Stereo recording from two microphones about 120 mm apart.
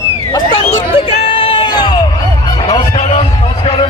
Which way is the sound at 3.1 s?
50° left (ahead or behind).